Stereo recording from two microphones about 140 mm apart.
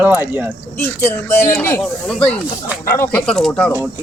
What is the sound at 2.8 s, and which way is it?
Speech, 20° left (ahead or behind).